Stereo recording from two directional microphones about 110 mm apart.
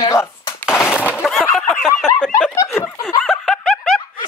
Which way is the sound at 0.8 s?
20° left (ahead or behind).